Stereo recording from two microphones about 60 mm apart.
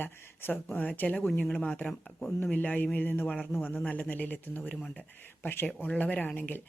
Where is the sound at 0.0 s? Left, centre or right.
Left.